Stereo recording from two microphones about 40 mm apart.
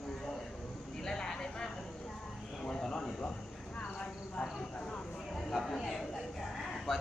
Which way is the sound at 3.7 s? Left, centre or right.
Left.